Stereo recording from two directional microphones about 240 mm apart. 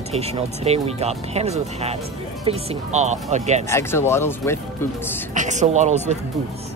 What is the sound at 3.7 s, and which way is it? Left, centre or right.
Speech, centre.